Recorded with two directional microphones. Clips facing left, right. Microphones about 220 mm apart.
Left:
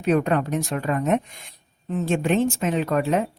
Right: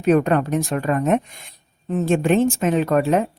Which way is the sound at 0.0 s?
50° right (ahead or behind).